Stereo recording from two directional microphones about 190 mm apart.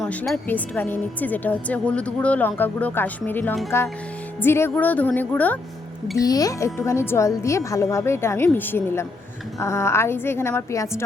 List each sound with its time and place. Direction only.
0.0 s a woman's voice: 5° left (ahead or behind)
6.1 s a child's voice: 20° left (ahead or behind)